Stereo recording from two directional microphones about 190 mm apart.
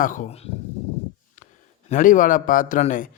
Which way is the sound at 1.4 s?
40° left (ahead or behind).